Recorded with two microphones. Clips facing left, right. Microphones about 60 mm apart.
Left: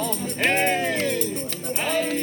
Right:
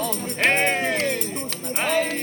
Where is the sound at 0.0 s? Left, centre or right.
Right.